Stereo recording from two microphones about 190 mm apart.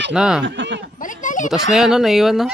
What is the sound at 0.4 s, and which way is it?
Speech, 75° right (ahead or behind).